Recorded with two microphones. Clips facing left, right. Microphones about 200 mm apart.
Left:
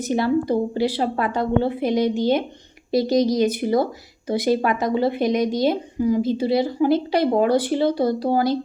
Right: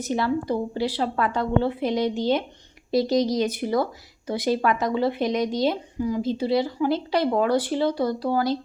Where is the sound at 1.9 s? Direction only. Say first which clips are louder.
Left 4 dB; 50° left (ahead or behind).